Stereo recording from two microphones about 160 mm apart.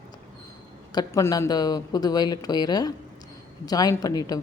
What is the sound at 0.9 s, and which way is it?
A woman's voice, 20° left (ahead or behind).